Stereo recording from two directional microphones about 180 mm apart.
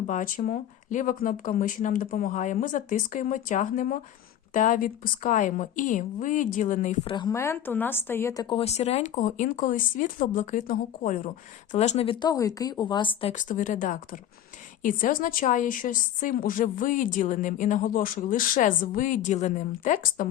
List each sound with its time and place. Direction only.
0.1 s a woman's voice: 45° left (ahead or behind)
7.0 s speech: 30° left (ahead or behind)
7.3 s speech: 15° left (ahead or behind); by 11.2 s 50° left (ahead or behind)
11.7 s a woman's voice: 40° left (ahead or behind)
13.3 s a woman's voice: 45° left (ahead or behind)